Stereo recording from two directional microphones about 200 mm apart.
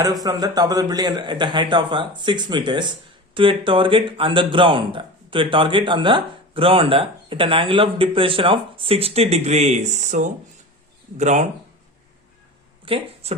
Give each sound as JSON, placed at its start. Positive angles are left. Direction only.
{"t": 0.0, "sound": "speech", "side_deg": -20}
{"t": 12.8, "sound": "speech", "side_deg": -25}